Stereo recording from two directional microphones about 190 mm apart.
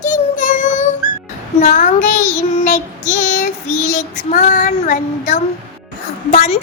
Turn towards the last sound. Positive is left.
turn(degrees=40)  # may be behind; listen again after turning